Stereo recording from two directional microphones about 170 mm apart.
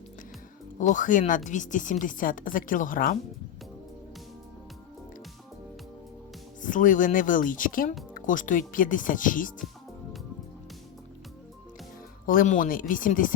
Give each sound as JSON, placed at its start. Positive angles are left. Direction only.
{"t": 0.8, "sound": "speech", "side_deg": 50}
{"t": 6.6, "sound": "speech", "side_deg": 50}
{"t": 12.2, "sound": "speech", "side_deg": 55}